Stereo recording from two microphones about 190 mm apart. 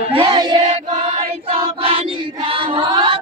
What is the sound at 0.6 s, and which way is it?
Choir, 35° right (ahead or behind).